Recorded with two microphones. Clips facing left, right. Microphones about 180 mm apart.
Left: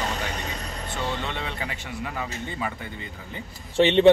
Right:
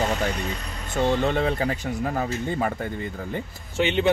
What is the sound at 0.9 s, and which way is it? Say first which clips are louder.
Speech: right 9 dB; 45° right (ahead or behind).